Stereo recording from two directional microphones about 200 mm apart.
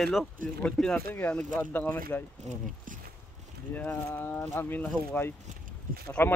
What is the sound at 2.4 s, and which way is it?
Speech, 35° right (ahead or behind).